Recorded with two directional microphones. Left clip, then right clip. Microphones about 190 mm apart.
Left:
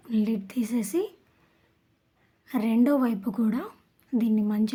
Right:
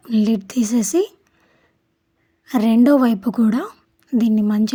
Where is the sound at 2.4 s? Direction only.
35° right (ahead or behind).